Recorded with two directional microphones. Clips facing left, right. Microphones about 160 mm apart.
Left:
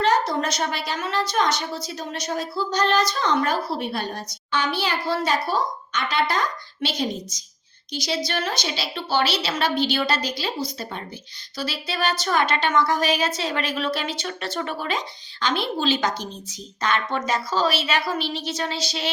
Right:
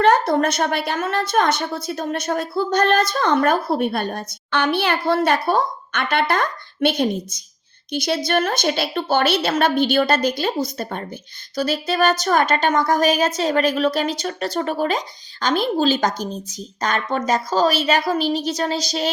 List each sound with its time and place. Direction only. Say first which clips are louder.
0.0 s a woman's voice: right 5 dB; 55° right (ahead or behind); by 19.1 s 40° right (ahead or behind)